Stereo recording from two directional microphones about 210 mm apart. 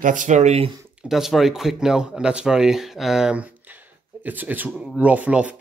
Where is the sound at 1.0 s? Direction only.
Centre (ahead or behind).